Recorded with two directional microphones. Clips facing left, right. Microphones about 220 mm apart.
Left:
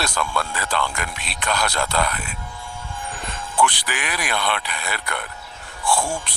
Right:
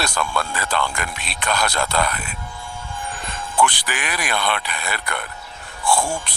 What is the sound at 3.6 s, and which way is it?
Speech, 45° right (ahead or behind).